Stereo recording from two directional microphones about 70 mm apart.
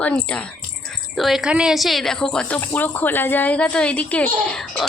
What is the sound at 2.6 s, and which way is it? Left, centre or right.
A child's voice, left.